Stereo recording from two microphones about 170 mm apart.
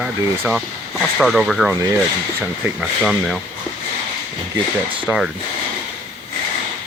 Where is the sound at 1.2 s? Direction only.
Centre (ahead or behind).